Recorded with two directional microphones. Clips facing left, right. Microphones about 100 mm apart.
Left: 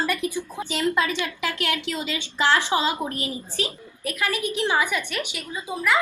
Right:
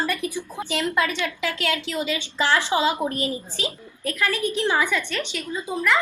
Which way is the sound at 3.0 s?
20° right (ahead or behind).